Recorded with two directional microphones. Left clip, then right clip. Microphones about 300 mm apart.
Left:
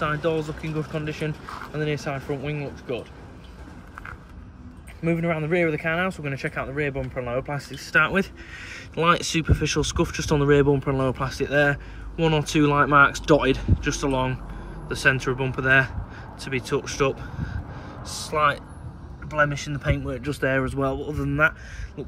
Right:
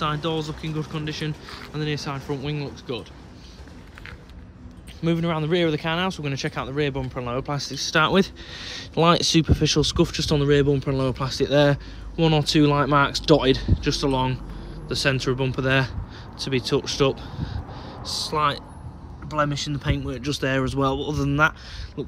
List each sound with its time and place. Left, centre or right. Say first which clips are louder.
0.0 s speech: left 1 dB; centre
5.0 s speech: even; centre